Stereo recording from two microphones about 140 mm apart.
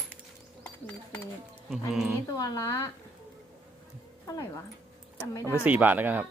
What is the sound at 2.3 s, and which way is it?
Speech, 25° left (ahead or behind).